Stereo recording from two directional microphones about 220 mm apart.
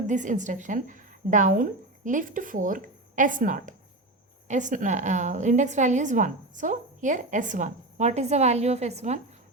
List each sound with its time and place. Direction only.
0.1 s a woman's voice: 35° right (ahead or behind)